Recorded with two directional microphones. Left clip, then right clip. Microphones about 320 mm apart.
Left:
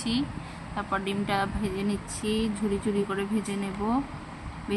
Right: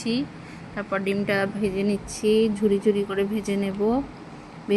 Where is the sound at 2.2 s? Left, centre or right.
Centre.